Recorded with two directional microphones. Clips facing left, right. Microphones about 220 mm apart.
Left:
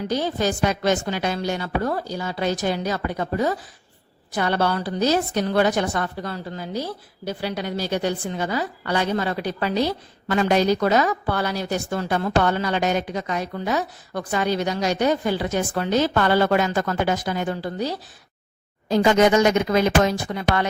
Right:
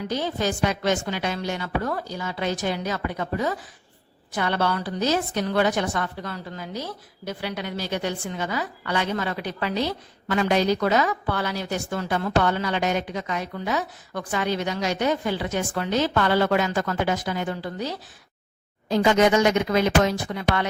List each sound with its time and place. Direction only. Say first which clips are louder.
0.1 s a woman's voice: left 3 dB; 40° left (ahead or behind)